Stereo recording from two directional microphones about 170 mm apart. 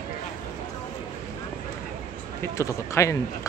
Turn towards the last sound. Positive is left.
turn(degrees=15)  # may be behind; listen again after turning